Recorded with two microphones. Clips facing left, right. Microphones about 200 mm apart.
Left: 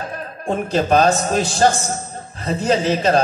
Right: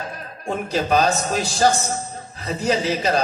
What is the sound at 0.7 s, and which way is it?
A man's voice, 50° left (ahead or behind).